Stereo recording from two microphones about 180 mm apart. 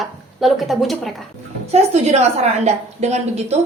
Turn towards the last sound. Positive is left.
turn(degrees=-35)  # may be behind; listen again after turning